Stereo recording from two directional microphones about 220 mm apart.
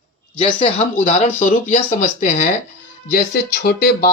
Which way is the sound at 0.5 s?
25° left (ahead or behind).